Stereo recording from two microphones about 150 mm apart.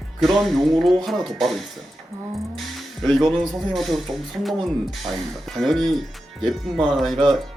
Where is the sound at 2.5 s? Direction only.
Centre (ahead or behind).